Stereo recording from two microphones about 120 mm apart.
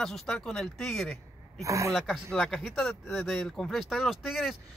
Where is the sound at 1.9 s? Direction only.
Centre (ahead or behind).